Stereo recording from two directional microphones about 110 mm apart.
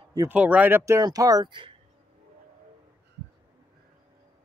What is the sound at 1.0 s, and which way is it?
Speech, 35° right (ahead or behind).